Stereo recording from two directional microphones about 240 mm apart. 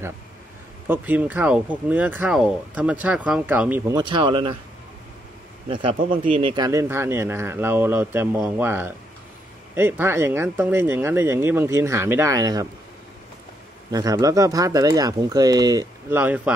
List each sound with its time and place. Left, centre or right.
0.8 s speech: centre
3.9 s speech: centre
5.7 s speech: right
13.9 s speech: centre